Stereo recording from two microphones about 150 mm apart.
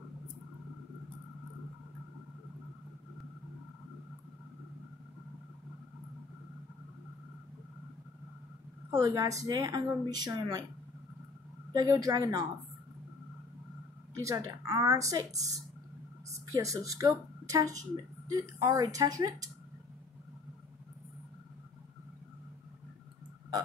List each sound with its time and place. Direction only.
8.9 s a woman's voice: 20° right (ahead or behind)
11.7 s a woman's voice: 25° right (ahead or behind)
14.1 s a woman's voice: 20° right (ahead or behind)